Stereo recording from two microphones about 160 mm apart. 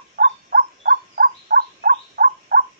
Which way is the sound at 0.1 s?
70° right (ahead or behind).